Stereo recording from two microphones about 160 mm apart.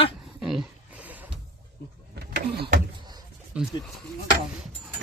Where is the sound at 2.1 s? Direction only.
90° right.